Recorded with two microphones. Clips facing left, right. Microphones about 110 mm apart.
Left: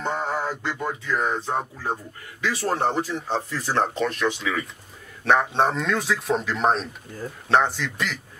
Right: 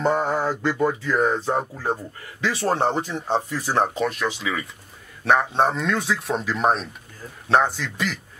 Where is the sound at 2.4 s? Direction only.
25° right (ahead or behind).